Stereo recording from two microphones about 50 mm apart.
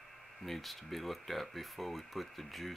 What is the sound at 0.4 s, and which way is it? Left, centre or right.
Speech, centre.